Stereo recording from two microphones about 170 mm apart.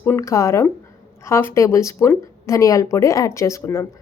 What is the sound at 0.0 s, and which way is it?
Speech, 15° left (ahead or behind).